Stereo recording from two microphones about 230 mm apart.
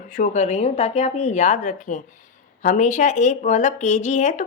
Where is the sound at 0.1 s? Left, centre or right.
Left.